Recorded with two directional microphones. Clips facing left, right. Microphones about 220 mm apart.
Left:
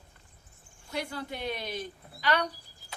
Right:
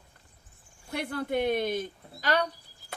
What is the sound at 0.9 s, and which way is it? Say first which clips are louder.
Speech: right 5 dB; 55° right (ahead or behind).